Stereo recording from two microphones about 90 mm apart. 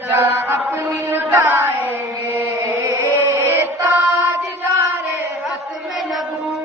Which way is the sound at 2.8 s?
25° right (ahead or behind).